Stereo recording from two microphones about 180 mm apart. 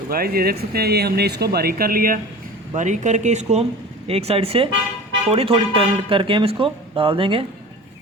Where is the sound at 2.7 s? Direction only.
45° right (ahead or behind).